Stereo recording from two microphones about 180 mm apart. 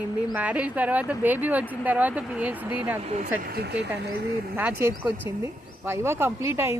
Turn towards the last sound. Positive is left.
turn(degrees=-15)  # may be behind; listen again after turning